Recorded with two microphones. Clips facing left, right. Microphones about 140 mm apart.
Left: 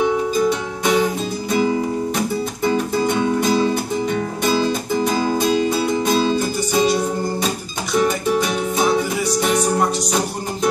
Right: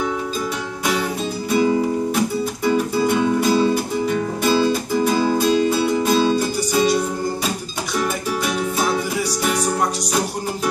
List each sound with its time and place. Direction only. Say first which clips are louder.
0.5 s music: left 4 dB; 5° right (ahead or behind)
8.0 s music: left 5 dB; centre (ahead or behind)